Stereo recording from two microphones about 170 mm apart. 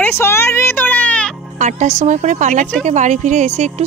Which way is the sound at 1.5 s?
45° right (ahead or behind).